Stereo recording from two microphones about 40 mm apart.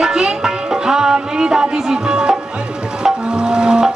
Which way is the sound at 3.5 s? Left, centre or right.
Centre.